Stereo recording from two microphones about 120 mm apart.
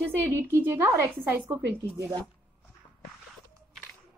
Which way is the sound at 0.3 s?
20° right (ahead or behind).